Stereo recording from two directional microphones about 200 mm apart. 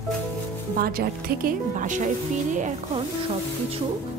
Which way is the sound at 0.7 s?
45° right (ahead or behind).